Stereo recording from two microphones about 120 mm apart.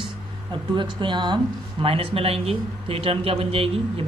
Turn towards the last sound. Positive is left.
turn(degrees=-50)  # may be behind; listen again after turning